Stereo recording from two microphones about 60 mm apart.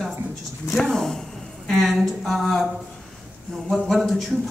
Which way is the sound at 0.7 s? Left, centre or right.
Centre.